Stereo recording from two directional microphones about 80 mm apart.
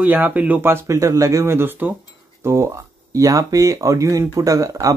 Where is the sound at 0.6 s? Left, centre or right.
Right.